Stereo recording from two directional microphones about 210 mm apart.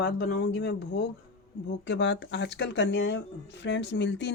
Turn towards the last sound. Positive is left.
turn(degrees=55)  # may be behind; listen again after turning